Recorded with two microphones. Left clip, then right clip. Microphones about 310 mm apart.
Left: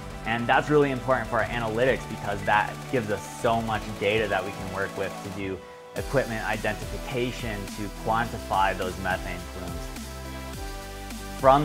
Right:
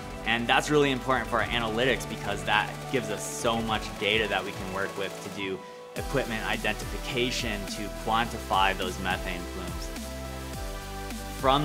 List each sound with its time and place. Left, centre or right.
0.2 s speech: left
6.1 s speech: left
8.1 s speech: left
11.4 s speech: left